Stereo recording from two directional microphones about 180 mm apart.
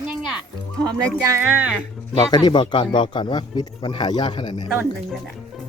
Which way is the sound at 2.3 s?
25° left (ahead or behind).